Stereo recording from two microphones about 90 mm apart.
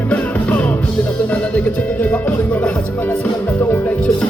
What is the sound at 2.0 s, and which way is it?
Music, 20° left (ahead or behind).